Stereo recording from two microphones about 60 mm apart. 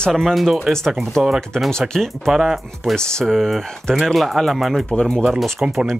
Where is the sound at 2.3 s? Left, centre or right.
Centre.